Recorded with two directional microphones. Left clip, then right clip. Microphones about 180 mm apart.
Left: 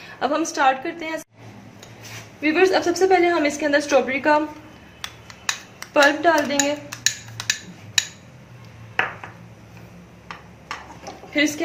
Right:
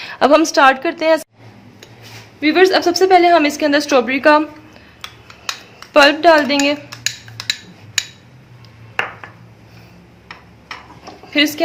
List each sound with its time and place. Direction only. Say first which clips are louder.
0.1 s a woman's voice: right 11 dB; 60° right (ahead or behind)
2.4 s a woman's voice: right 6 dB; 55° right (ahead or behind)
5.9 s speech: right 7 dB; 50° right (ahead or behind)
6.9 s computer keyboard: right 1 dB; 5° right (ahead or behind)
11.3 s speech: right 6 dB; 50° right (ahead or behind)